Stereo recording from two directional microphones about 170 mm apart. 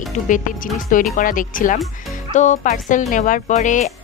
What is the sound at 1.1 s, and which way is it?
Speech, 55° left (ahead or behind).